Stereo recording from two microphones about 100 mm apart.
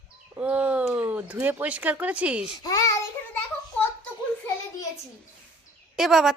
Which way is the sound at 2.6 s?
35° left (ahead or behind).